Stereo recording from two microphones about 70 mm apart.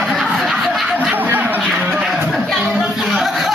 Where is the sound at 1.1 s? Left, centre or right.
Right.